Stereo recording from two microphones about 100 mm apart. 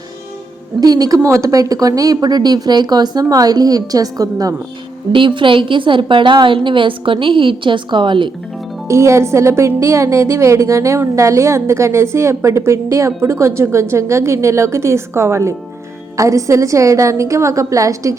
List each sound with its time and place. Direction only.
0.8 s a woman's voice: 40° right (ahead or behind)
5.1 s a woman's voice: 55° right (ahead or behind)
8.9 s a woman's voice: 30° right (ahead or behind)